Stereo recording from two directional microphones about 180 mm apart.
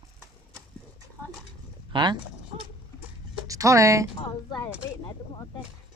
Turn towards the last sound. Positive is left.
turn(degrees=25)  # may be behind; listen again after turning